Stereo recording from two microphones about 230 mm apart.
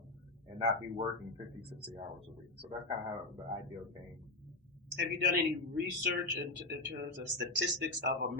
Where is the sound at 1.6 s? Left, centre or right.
Right.